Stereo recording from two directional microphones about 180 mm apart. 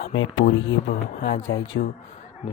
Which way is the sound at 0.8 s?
65° left (ahead or behind).